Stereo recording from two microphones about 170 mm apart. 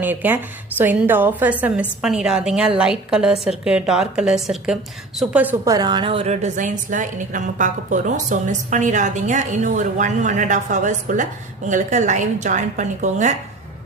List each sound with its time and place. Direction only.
0.0 s a woman's voice: 10° right (ahead or behind)
5.7 s a woman's voice: 25° right (ahead or behind); by 13.3 s 45° right (ahead or behind)